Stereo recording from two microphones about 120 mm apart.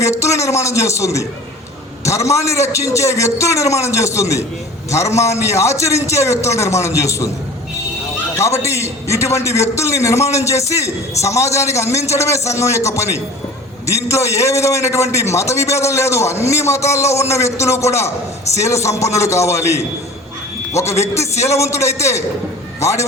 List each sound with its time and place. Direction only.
0.0 s a man's voice: 25° left (ahead or behind)
2.3 s a man's voice: 25° left (ahead or behind)
8.4 s a man's voice: 25° left (ahead or behind)
20.8 s a man's voice: 25° left (ahead or behind)